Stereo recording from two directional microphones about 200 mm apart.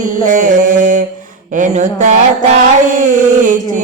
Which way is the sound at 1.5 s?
40° right (ahead or behind).